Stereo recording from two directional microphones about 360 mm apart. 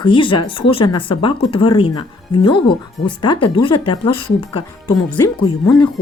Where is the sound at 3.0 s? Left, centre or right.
Centre.